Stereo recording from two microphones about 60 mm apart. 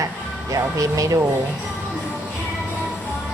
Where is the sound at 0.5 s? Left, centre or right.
Right.